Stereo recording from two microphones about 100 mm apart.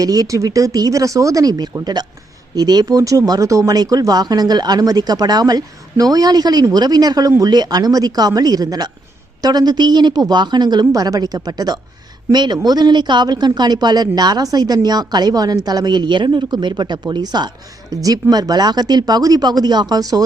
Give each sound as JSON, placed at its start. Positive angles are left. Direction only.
{"t": 0.0, "sound": "speech", "side_deg": -35}